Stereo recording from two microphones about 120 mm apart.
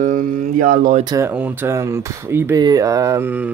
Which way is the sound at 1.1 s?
25° right (ahead or behind).